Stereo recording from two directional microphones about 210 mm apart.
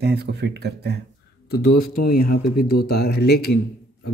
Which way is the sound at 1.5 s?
50° left (ahead or behind).